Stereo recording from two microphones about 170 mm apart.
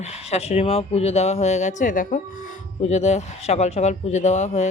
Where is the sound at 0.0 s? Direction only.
40° left (ahead or behind).